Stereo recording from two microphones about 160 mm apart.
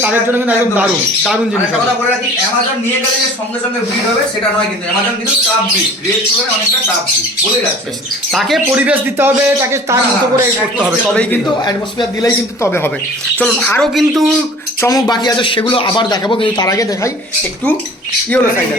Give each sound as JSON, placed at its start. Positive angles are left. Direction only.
{"t": 0.0, "sound": "a man's voice", "side_deg": -10}
{"t": 1.2, "sound": "speech", "side_deg": 0}
{"t": 8.3, "sound": "speech", "side_deg": 0}
{"t": 8.7, "sound": "a man's voice", "side_deg": -10}
{"t": 11.1, "sound": "a man's voice", "side_deg": 5}
{"t": 11.6, "sound": "speech", "side_deg": 25}
{"t": 14.8, "sound": "speech", "side_deg": 20}